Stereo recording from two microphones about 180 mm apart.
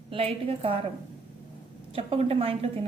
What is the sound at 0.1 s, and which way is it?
Speech, 30° right (ahead or behind).